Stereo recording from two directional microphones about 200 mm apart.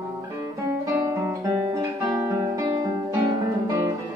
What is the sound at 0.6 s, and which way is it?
Guitar, 10° right (ahead or behind).